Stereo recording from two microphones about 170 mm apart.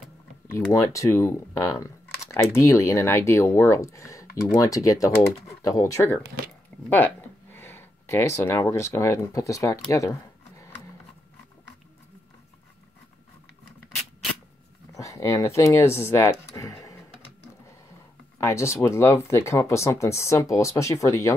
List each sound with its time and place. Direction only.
0.5 s speech: 15° left (ahead or behind)
15.0 s speech: 20° left (ahead or behind)
18.4 s speech: 15° left (ahead or behind)